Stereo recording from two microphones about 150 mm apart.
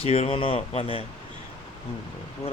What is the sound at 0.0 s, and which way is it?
Speech, 40° left (ahead or behind).